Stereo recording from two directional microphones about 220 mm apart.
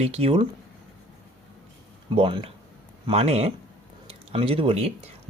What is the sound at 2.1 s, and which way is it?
Speech, 25° right (ahead or behind).